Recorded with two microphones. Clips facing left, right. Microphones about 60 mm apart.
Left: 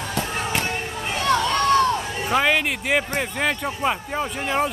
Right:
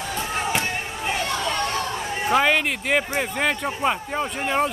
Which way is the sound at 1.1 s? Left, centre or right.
Left.